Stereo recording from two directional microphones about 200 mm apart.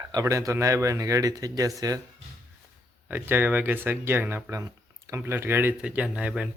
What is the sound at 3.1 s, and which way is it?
Speech, 10° right (ahead or behind).